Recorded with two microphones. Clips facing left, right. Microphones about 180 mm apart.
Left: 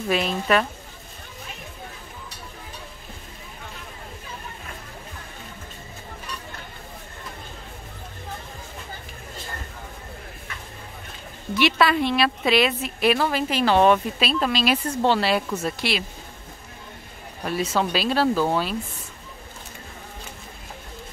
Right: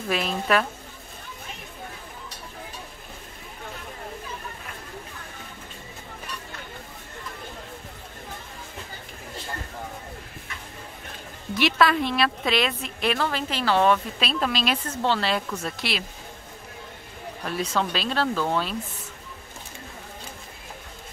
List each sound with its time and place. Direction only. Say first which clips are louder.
0.1 s speech: left 2 dB; centre (ahead or behind)
11.5 s a woman's voice: left 1 dB; centre (ahead or behind); by 14.0 s 20° left (ahead or behind)
14.2 s speech: left 3 dB; centre (ahead or behind)
14.9 s a woman's voice: left 4 dB; 15° left (ahead or behind)
17.5 s a woman's voice: left 3 dB; 5° left (ahead or behind)